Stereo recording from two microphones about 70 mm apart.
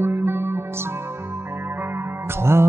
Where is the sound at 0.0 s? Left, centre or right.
Right.